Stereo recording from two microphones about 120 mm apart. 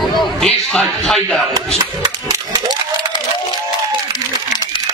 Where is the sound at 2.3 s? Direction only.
35° right (ahead or behind).